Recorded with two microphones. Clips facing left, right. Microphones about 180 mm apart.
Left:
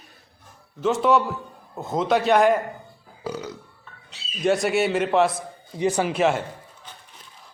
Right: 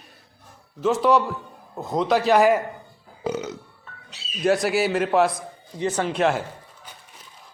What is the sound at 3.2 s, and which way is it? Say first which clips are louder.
Burping: right 4 dB; 20° right (ahead or behind).